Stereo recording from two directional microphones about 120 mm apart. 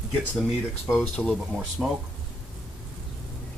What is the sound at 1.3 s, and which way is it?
Speech, centre (ahead or behind).